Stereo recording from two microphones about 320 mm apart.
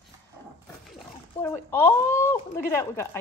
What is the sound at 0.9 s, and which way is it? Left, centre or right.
Speech, centre.